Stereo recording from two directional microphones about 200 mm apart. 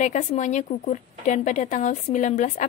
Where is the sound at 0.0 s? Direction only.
40° left (ahead or behind).